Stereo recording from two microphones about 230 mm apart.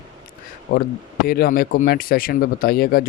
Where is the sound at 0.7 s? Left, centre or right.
Left.